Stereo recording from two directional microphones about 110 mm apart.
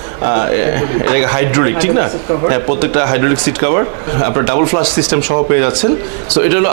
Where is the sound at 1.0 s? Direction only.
15° right (ahead or behind).